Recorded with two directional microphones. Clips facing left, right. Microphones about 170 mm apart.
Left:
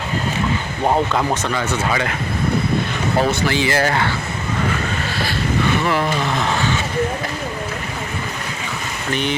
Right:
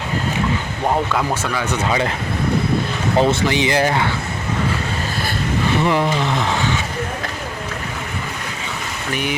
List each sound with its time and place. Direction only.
1.1 s speech: 10° right (ahead or behind)
3.2 s speech: 20° right (ahead or behind)
5.8 s speech: 20° right (ahead or behind)